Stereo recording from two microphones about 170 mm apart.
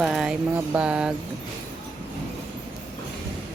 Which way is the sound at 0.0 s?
5° right (ahead or behind).